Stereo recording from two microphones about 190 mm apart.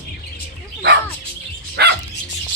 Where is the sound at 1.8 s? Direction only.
60° right (ahead or behind).